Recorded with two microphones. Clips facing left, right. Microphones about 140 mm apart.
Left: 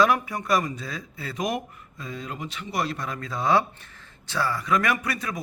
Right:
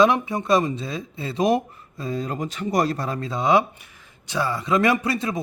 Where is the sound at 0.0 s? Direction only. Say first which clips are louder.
Right 4 dB; 25° right (ahead or behind).